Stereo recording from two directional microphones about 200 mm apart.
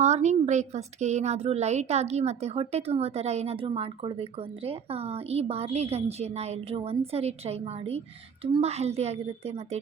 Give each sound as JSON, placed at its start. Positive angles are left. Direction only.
{"t": 0.0, "sound": "speech", "side_deg": -35}